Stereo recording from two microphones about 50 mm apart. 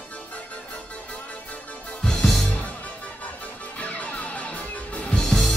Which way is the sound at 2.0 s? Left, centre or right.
Centre.